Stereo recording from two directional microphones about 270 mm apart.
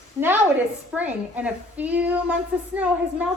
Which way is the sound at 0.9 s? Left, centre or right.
Centre.